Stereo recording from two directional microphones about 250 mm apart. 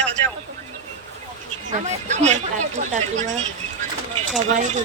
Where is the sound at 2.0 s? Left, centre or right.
Right.